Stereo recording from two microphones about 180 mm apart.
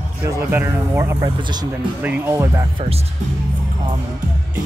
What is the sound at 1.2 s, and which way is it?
Speech, 25° right (ahead or behind).